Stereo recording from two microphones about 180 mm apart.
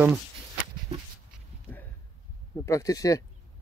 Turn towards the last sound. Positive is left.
turn(degrees=20)  # may be behind; listen again after turning